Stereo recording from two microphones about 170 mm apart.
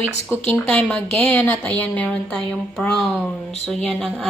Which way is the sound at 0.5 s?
10° left (ahead or behind).